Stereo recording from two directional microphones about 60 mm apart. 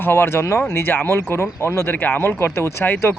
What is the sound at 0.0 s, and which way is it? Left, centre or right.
Speech, left.